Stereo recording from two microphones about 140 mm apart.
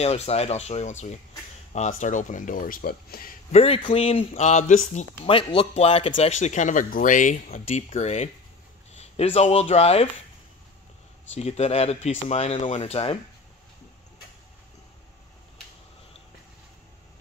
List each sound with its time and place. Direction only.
0.0 s speech: 45° left (ahead or behind); by 3.3 s 90° left
3.5 s speech: 45° left (ahead or behind)
5.3 s speech: 35° left (ahead or behind)
11.3 s speech: 50° left (ahead or behind)